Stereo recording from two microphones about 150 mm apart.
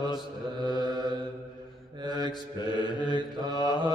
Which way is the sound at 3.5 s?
30° left (ahead or behind).